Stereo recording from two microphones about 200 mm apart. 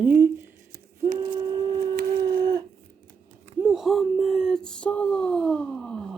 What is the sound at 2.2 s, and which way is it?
Livestock, 20° right (ahead or behind).